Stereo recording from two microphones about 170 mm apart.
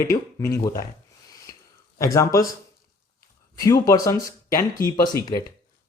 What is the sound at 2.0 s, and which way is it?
Speech, 20° left (ahead or behind).